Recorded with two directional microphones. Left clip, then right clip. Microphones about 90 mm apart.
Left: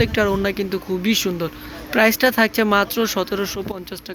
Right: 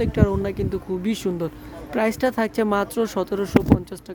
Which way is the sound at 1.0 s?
40° right (ahead or behind).